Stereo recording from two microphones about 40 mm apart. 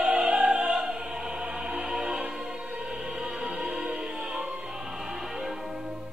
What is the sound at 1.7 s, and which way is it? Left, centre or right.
Music, centre.